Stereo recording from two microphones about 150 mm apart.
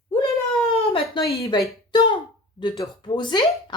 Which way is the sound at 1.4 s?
25° left (ahead or behind).